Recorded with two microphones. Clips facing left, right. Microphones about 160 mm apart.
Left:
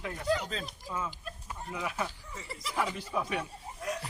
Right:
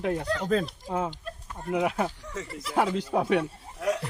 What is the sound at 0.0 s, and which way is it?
Speech, 65° right (ahead or behind).